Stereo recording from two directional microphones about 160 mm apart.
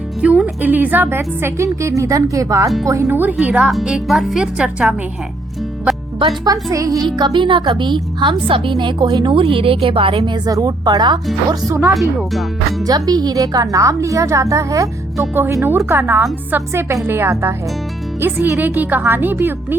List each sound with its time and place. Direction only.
0.2 s a woman's voice: 10° right (ahead or behind)
6.1 s a woman's voice: 30° right (ahead or behind); by 19.5 s 10° right (ahead or behind)